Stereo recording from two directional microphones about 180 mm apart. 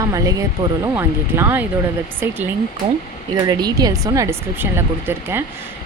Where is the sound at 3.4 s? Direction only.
20° right (ahead or behind).